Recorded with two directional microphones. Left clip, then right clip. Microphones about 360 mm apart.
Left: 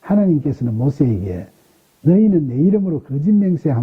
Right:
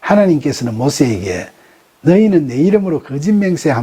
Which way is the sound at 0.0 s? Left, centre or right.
Centre.